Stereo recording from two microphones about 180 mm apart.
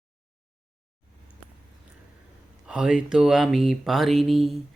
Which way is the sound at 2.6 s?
5° right (ahead or behind).